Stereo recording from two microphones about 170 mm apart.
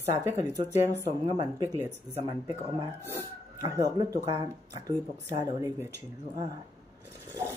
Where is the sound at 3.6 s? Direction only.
20° right (ahead or behind).